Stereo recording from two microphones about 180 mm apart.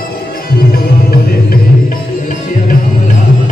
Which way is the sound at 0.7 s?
60° left (ahead or behind).